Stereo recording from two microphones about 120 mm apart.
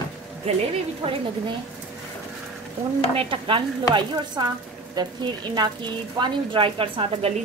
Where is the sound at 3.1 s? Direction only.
50° right (ahead or behind).